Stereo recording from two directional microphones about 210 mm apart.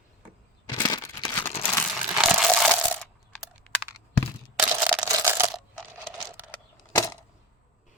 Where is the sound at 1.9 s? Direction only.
Centre (ahead or behind).